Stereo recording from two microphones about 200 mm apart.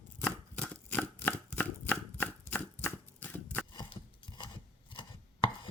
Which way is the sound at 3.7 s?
20° left (ahead or behind).